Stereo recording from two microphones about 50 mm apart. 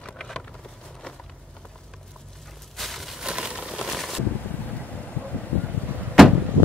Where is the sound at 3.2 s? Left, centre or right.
Centre.